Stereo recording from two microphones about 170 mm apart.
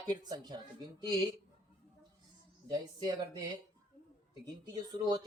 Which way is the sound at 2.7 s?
25° right (ahead or behind).